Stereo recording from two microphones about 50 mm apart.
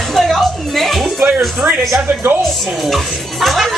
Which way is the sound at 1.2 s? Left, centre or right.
Right.